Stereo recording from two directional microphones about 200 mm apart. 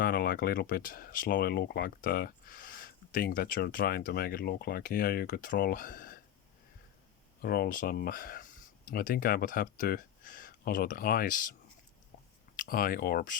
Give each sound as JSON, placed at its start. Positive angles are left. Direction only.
{"t": 0.0, "sound": "speech", "side_deg": 50}
{"t": 7.4, "sound": "speech", "side_deg": 50}
{"t": 12.5, "sound": "speech", "side_deg": 45}